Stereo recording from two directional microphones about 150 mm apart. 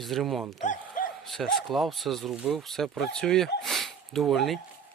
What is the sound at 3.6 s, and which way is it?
Sniff, centre (ahead or behind).